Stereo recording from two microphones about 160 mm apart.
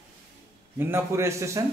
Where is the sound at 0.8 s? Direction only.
15° right (ahead or behind).